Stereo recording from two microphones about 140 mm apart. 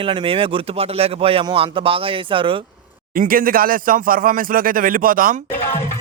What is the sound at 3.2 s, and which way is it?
Speech, 90° right.